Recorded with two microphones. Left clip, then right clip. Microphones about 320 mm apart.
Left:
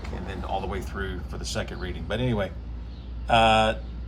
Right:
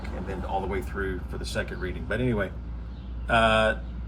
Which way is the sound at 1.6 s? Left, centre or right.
Left.